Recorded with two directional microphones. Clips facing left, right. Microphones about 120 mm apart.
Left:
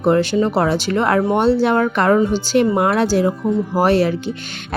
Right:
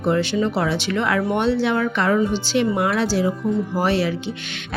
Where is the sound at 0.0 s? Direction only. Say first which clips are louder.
Left 5 dB; 45° left (ahead or behind).